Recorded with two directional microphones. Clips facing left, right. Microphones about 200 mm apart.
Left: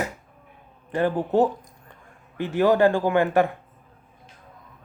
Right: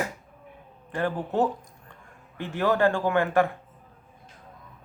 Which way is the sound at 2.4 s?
15° left (ahead or behind).